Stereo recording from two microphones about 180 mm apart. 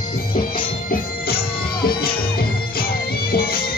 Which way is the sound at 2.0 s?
55° left (ahead or behind).